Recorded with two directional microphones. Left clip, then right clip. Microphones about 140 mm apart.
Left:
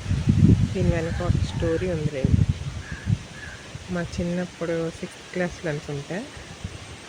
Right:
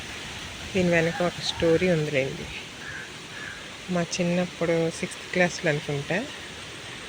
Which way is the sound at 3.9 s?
5° left (ahead or behind).